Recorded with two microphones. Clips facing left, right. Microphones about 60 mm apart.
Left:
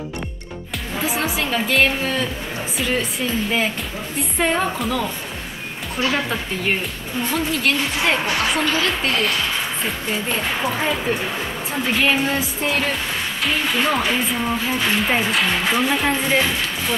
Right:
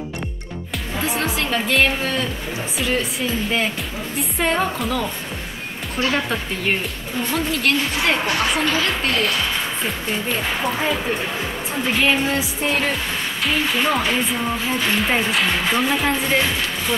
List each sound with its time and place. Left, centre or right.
0.9 s a woman's voice: centre